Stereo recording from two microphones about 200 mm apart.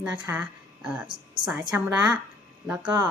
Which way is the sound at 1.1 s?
25° right (ahead or behind).